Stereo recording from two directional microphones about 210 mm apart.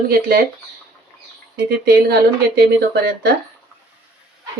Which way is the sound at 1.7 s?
50° right (ahead or behind).